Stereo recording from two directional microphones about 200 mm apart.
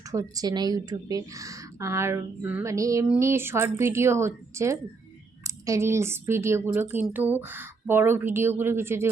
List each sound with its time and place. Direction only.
0.1 s a woman's voice: 15° right (ahead or behind)